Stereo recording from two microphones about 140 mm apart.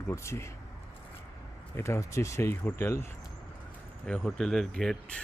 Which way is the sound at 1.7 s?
20° left (ahead or behind).